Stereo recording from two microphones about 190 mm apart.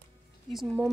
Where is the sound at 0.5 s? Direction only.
Centre (ahead or behind).